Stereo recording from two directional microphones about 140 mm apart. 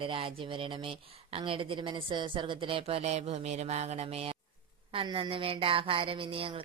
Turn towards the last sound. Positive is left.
turn(degrees=-40)  # may be behind; listen again after turning